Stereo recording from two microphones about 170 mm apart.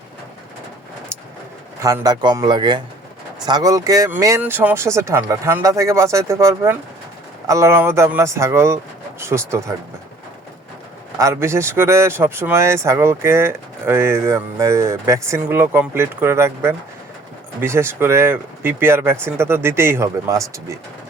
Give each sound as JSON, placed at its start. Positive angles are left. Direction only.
{"t": 1.8, "sound": "speech", "side_deg": -20}
{"t": 11.2, "sound": "speech", "side_deg": -15}